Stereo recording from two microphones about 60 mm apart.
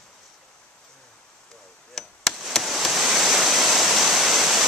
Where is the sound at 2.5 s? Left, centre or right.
Centre.